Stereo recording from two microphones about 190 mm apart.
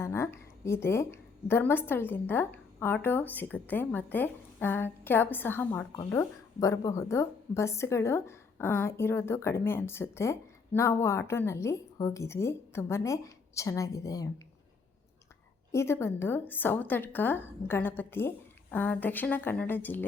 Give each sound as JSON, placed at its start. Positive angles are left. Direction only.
{"t": 0.0, "sound": "a woman's voice", "side_deg": 15}
{"t": 15.7, "sound": "a woman's voice", "side_deg": 15}